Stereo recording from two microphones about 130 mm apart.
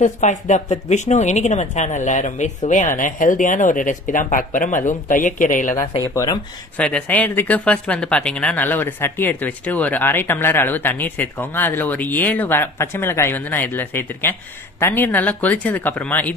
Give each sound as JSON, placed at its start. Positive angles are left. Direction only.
{"t": 0.0, "sound": "speech", "side_deg": 70}
{"t": 6.1, "sound": "speech", "side_deg": 25}
{"t": 6.8, "sound": "speech", "side_deg": 10}